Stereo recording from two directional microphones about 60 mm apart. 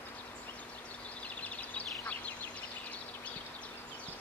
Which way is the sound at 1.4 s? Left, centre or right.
Left.